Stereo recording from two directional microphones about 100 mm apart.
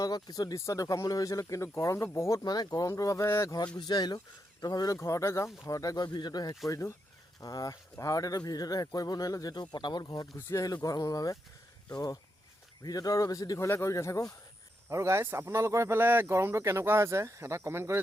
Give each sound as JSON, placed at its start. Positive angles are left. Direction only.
{"t": 0.0, "sound": "speech", "side_deg": 40}
{"t": 2.4, "sound": "speech", "side_deg": 40}
{"t": 3.8, "sound": "speech", "side_deg": 45}
{"t": 4.9, "sound": "speech", "side_deg": 30}
{"t": 6.7, "sound": "speech", "side_deg": 30}
{"t": 14.8, "sound": "speech", "side_deg": -30}